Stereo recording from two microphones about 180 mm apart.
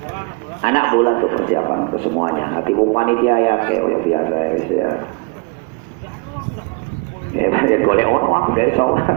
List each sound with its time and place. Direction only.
0.6 s a man's voice: 40° left (ahead or behind)
7.3 s a man's voice: 40° left (ahead or behind)